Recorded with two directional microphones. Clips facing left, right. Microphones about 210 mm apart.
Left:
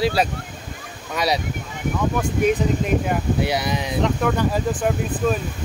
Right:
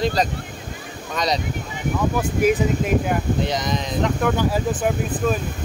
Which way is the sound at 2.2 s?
5° right (ahead or behind).